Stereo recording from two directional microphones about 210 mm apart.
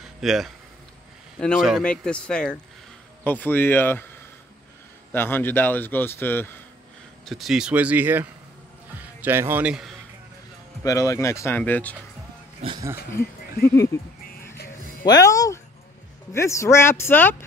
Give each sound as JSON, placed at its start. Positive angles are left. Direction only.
{"t": 0.2, "sound": "a man's voice", "side_deg": 0}
{"t": 5.1, "sound": "a man's voice", "side_deg": 10}
{"t": 7.2, "sound": "speech", "side_deg": 0}
{"t": 10.8, "sound": "a man's voice", "side_deg": 15}
{"t": 12.6, "sound": "speech", "side_deg": -20}
{"t": 13.7, "sound": "music", "side_deg": 15}
{"t": 15.0, "sound": "a man's voice", "side_deg": 15}